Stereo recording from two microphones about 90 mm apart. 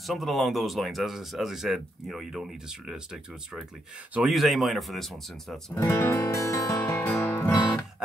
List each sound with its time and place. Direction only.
0.0 s speech: centre (ahead or behind)
4.3 s speech: centre (ahead or behind)
5.8 s music: 35° left (ahead or behind)
7.0 s music: 25° left (ahead or behind)